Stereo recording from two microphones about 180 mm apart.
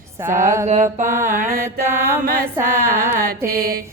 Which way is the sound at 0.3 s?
45° right (ahead or behind).